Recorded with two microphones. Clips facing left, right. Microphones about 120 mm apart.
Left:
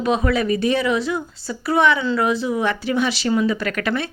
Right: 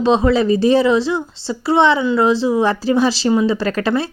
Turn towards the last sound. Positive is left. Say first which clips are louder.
# right 5 dB
turn(degrees=-30)  # may be behind; listen again after turning